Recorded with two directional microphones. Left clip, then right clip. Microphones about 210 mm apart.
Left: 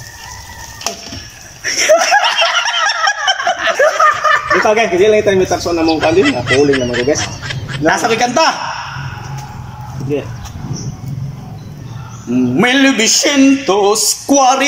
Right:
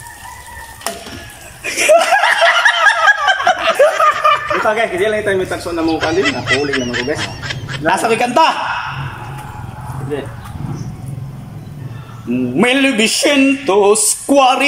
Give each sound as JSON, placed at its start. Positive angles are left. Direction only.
{"t": 1.6, "sound": "chuckle", "side_deg": -10}
{"t": 2.2, "sound": "snicker", "side_deg": 5}
{"t": 4.6, "sound": "a man's voice", "side_deg": 10}
{"t": 10.1, "sound": "speech", "side_deg": 10}
{"t": 12.5, "sound": "a sound", "side_deg": -10}